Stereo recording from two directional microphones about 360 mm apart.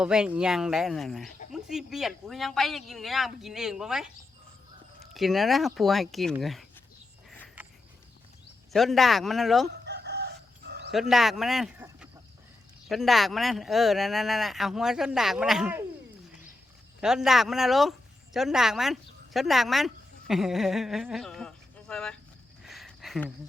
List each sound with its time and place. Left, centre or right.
0.0 s speech: centre
5.1 s speech: centre
7.3 s a sound: centre
8.7 s speech: centre
9.8 s chicken: right
11.1 s speech: centre
17.0 s speech: centre
22.6 s a sound: centre